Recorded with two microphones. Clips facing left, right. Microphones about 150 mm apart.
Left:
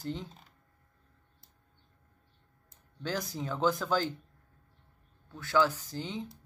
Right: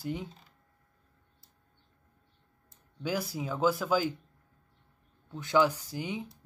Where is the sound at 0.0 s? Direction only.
10° right (ahead or behind).